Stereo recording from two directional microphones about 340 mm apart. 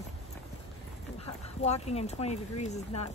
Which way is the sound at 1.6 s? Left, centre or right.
Centre.